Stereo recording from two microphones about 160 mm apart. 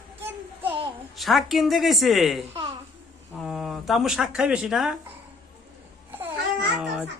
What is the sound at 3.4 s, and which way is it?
Speech, centre (ahead or behind).